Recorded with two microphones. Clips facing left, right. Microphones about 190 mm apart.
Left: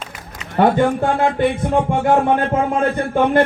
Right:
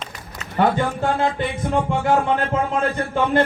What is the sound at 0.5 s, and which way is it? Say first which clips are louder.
Speech: left 5 dB; 55° left (ahead or behind).